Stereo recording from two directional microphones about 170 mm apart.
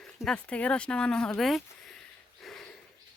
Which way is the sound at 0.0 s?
5° left (ahead or behind).